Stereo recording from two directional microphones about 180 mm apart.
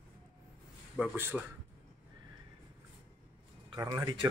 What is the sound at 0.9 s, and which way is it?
Speech, 10° right (ahead or behind).